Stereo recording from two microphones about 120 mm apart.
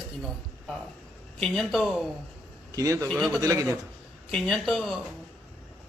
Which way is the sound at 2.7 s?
25° right (ahead or behind).